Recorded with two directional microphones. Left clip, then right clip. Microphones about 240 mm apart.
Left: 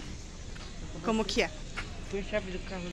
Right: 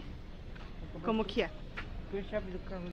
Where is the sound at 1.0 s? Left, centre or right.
Centre.